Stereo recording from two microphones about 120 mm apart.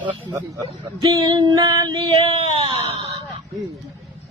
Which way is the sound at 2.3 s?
55° right (ahead or behind).